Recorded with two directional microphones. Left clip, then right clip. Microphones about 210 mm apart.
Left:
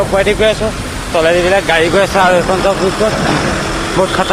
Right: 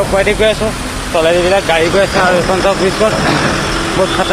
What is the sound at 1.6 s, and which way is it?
Speech, 20° left (ahead or behind).